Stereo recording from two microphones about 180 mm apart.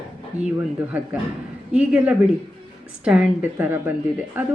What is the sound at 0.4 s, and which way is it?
Speech, 5° right (ahead or behind).